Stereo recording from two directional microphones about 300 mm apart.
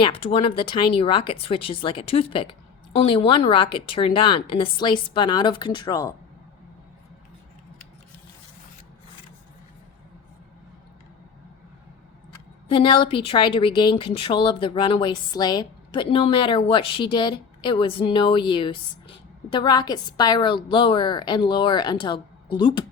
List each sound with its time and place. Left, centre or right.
0.0 s speech: centre
12.6 s speech: centre